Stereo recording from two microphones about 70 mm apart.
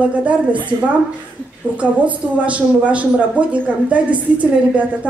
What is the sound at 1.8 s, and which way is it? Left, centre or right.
Speech, centre.